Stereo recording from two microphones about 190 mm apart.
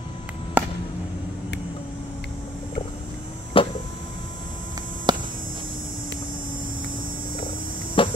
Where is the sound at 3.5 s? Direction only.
30° left (ahead or behind).